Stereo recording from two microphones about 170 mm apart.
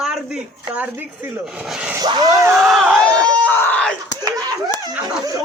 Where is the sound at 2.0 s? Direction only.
25° right (ahead or behind).